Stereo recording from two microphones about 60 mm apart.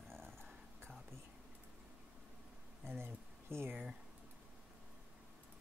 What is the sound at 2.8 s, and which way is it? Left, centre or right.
Speech, right.